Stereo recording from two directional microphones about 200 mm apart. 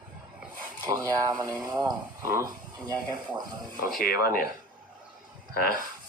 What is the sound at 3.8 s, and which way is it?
Speech, 45° left (ahead or behind).